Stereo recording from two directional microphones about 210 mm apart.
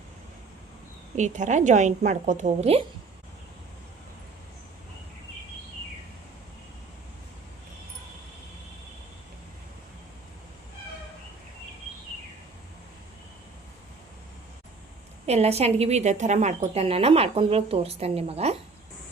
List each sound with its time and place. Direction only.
1.1 s a woman's voice: 35° right (ahead or behind)
15.3 s a woman's voice: 30° right (ahead or behind)